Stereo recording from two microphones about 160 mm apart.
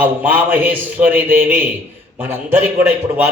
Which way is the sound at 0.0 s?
10° right (ahead or behind).